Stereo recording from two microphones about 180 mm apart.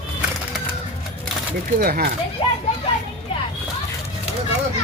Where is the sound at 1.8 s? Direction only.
55° right (ahead or behind).